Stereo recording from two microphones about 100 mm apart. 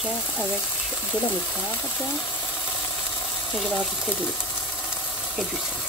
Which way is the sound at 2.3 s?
25° left (ahead or behind).